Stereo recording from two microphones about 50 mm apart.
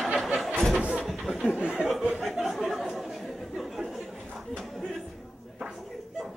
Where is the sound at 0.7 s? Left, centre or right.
Right.